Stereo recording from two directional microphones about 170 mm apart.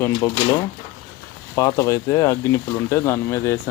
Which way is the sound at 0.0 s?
20° left (ahead or behind).